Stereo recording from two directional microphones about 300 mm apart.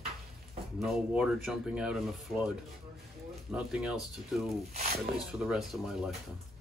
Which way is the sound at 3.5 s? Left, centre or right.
Centre.